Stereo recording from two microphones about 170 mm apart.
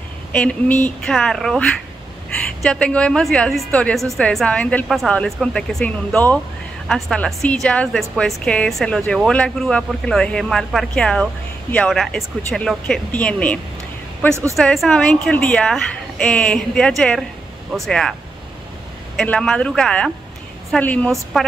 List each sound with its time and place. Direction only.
0.3 s a woman's voice: 5° left (ahead or behind)
2.6 s a woman's voice: 5° left (ahead or behind)
14.3 s speech: 15° right (ahead or behind)
14.6 s a woman's voice: 5° left (ahead or behind)
19.1 s a woman's voice: 5° left (ahead or behind)